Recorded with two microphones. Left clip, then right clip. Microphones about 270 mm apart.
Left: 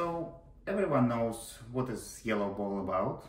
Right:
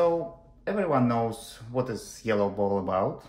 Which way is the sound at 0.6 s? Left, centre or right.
Right.